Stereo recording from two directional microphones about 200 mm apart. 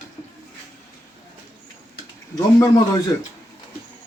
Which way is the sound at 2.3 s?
20° left (ahead or behind).